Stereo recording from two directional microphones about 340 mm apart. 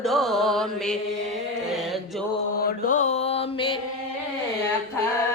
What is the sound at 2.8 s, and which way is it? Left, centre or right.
Music, left.